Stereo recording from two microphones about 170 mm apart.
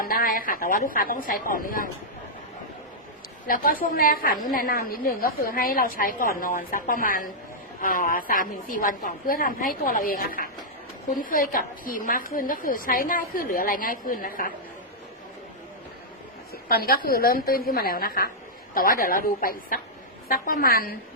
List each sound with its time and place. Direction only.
0.0 s a woman's voice: 55° left (ahead or behind)
3.4 s a woman's voice: 55° left (ahead or behind)
16.6 s a woman's voice: 60° left (ahead or behind)